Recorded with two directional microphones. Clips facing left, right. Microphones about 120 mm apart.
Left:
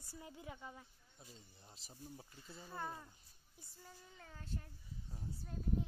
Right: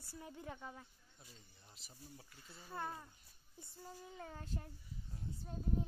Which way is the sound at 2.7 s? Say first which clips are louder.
Right 2 dB; 5° right (ahead or behind).